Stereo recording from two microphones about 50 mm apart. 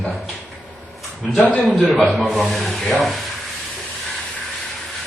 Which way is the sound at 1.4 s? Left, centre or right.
Left.